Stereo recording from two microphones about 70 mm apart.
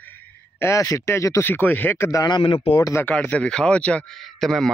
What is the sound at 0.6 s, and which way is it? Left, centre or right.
Speech, left.